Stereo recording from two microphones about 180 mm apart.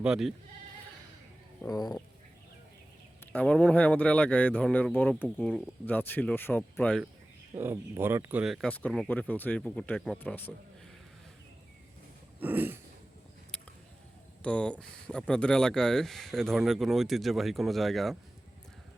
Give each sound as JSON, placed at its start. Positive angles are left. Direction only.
{"t": 0.0, "sound": "speech", "side_deg": -5}
{"t": 1.6, "sound": "speech", "side_deg": 20}
{"t": 3.3, "sound": "speech", "side_deg": 5}
{"t": 5.5, "sound": "speech", "side_deg": 0}
{"t": 5.8, "sound": "speech", "side_deg": 10}
{"t": 7.5, "sound": "speech", "side_deg": -15}
{"t": 12.4, "sound": "throat clearing", "side_deg": -10}
{"t": 14.4, "sound": "speech", "side_deg": 5}